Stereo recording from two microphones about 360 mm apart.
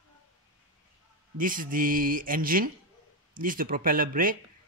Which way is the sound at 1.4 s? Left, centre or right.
Right.